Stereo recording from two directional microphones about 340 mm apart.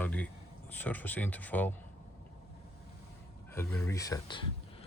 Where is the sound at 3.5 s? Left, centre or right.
Centre.